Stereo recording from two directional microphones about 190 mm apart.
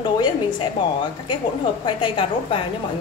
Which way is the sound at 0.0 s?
25° left (ahead or behind).